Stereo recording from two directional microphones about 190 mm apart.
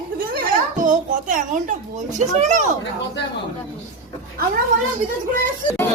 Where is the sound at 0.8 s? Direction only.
45° right (ahead or behind).